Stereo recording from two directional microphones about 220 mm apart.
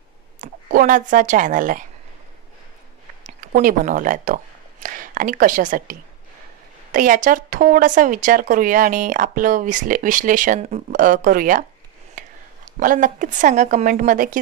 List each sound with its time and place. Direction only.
0.4 s a woman's voice: 40° right (ahead or behind)
3.3 s a woman's voice: 35° right (ahead or behind)